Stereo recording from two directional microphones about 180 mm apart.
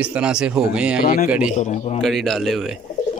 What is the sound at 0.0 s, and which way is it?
Speech, 5° right (ahead or behind).